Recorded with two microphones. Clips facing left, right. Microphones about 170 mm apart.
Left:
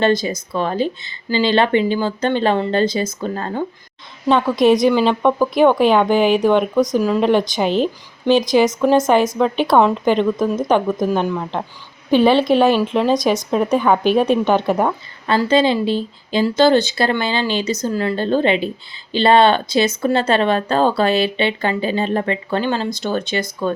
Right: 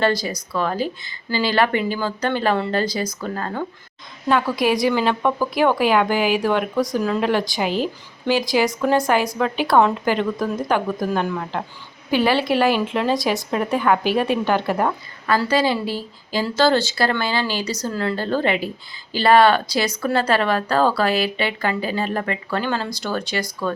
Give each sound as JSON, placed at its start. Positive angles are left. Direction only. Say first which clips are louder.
{"t": 0.0, "sound": "speech", "louder": "left 4 dB", "side_deg": 20}